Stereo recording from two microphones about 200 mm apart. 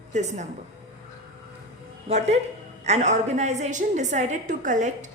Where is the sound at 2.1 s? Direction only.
35° right (ahead or behind).